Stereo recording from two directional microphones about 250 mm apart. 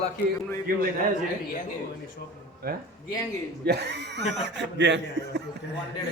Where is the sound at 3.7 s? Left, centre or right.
Right.